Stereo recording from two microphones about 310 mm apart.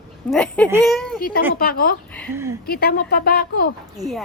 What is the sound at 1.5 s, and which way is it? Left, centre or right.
Speech, left.